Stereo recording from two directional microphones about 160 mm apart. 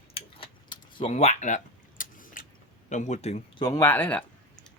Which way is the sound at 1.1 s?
45° left (ahead or behind).